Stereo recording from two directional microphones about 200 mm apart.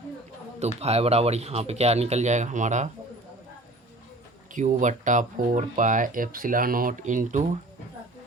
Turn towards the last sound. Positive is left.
turn(degrees=-40)  # may be behind; listen again after turning